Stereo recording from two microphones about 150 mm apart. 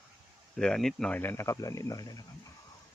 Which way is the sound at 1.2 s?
15° left (ahead or behind).